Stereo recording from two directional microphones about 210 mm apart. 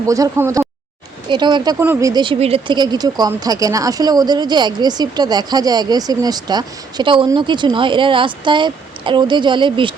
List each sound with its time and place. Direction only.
0.1 s speech: 15° right (ahead or behind)